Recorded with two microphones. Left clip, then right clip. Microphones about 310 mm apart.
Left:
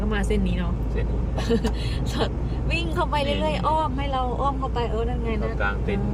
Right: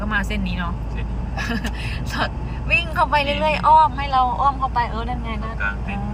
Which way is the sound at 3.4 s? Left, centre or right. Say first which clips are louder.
Right 9 dB; right.